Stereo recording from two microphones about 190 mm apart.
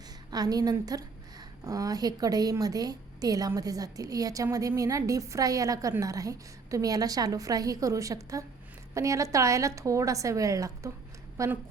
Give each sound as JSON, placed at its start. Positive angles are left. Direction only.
{"t": 0.3, "sound": "a woman's voice", "side_deg": -20}